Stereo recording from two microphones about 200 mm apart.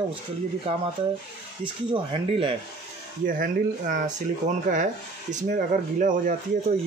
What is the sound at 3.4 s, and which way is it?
Speech, 40° right (ahead or behind).